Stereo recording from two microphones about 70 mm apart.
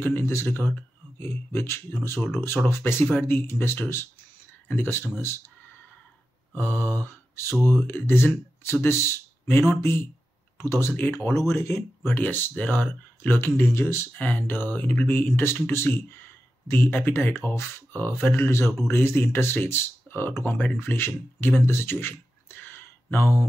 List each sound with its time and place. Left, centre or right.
0.0 s speech: left
6.5 s mantra: left
7.6 s speech: left
14.1 s speech: left